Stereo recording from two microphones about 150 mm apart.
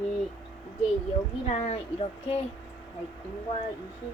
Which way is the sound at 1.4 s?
45° left (ahead or behind).